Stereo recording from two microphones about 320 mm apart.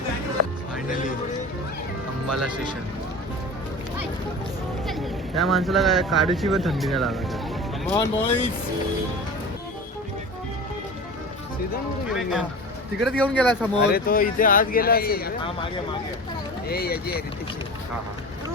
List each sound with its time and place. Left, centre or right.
4.9 s speech: centre
7.9 s speech: centre
12.1 s speech: centre
13.8 s speech: left
16.6 s speech: left